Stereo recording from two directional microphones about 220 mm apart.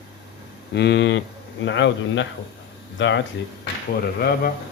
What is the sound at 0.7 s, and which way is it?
A man's voice, 50° left (ahead or behind).